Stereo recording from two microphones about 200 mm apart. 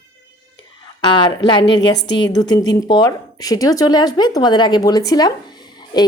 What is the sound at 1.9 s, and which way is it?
Speech, 60° left (ahead or behind).